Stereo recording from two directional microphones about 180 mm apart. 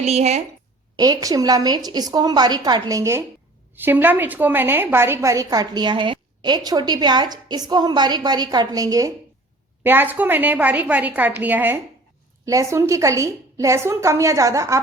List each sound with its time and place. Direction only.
0.0 s a woman's voice: 35° right (ahead or behind)
0.9 s a woman's voice: 20° right (ahead or behind)